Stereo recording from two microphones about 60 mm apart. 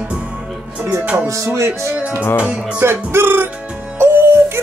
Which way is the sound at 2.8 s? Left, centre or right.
Right.